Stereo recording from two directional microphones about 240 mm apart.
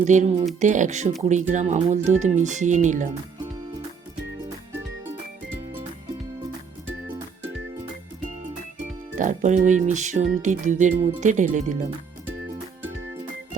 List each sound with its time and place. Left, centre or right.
0.0 s speech: right
9.1 s speech: right